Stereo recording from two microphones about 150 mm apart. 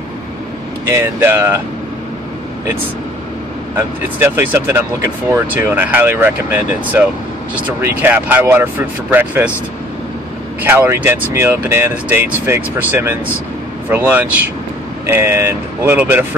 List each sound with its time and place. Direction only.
0.8 s speech: 15° right (ahead or behind)
3.7 s speech: 15° right (ahead or behind)
10.6 s speech: 15° right (ahead or behind)